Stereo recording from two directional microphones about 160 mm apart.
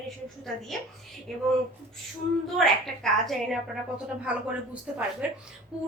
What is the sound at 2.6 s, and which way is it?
A woman's voice, 5° left (ahead or behind).